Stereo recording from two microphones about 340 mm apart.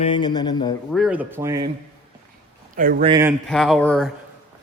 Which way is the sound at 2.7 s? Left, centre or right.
Right.